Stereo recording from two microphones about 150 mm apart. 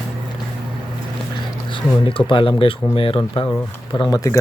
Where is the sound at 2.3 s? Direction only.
35° left (ahead or behind).